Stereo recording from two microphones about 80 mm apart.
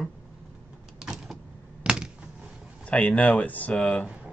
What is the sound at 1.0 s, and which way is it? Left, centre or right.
Power windows, centre.